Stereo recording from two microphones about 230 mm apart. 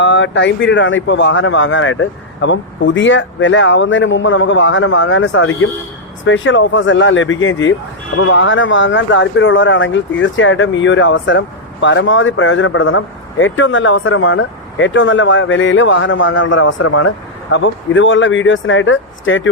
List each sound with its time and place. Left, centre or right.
0.0 s speech: left
16.3 s speech: left
17.5 s speech: left